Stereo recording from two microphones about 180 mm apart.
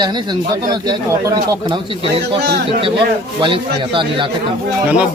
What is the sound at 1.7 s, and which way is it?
Speech, 30° right (ahead or behind).